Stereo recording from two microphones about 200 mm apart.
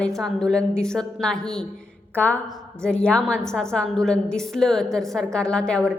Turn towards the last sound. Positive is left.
turn(degrees=5)  # may be behind; listen again after turning